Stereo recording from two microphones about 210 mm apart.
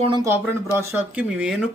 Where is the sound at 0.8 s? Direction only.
10° right (ahead or behind).